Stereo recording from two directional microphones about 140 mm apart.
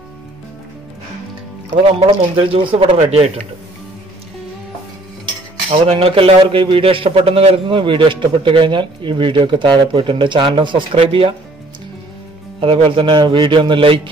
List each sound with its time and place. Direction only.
1.8 s a man's voice: 40° right (ahead or behind)
5.9 s a man's voice: 45° right (ahead or behind)
12.5 s a man's voice: 40° right (ahead or behind)